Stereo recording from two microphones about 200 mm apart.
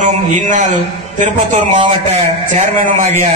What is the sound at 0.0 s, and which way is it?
A man's voice, 40° right (ahead or behind).